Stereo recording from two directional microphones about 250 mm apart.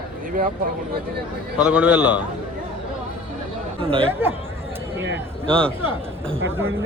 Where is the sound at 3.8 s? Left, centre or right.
Right.